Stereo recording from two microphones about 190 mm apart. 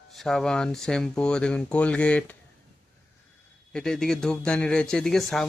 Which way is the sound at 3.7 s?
5° left (ahead or behind).